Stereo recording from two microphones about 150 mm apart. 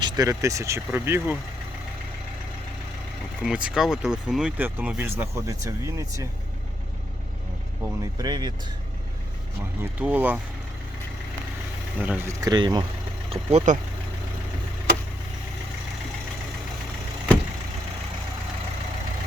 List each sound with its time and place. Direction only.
0.0 s speech: 25° right (ahead or behind)
3.4 s speech: 5° right (ahead or behind); by 6.2 s 20° right (ahead or behind)
8.2 s speech: 30° right (ahead or behind)
9.8 s speech: 10° right (ahead or behind)
11.9 s speech: 10° right (ahead or behind)
12.4 s speech: 25° right (ahead or behind)
13.3 s speech: 45° right (ahead or behind)